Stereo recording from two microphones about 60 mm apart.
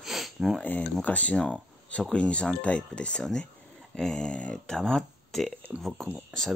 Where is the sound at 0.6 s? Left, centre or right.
Left.